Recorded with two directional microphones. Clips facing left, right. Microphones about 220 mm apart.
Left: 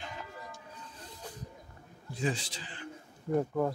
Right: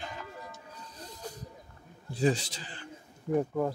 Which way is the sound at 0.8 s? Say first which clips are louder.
Right 5 dB; 40° right (ahead or behind).